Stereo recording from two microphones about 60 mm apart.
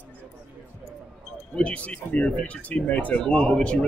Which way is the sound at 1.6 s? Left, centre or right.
Centre.